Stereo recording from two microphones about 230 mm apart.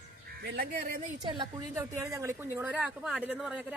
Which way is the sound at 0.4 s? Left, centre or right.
Right.